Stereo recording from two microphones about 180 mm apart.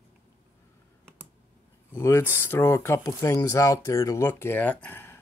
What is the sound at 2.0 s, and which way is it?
Speech, 15° left (ahead or behind).